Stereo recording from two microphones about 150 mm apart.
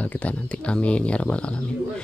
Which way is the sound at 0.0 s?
10° left (ahead or behind).